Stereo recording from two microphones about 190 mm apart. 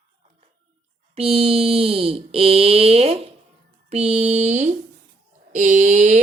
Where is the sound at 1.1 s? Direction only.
30° right (ahead or behind).